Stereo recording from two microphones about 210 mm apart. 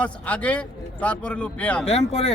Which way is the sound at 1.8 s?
30° left (ahead or behind).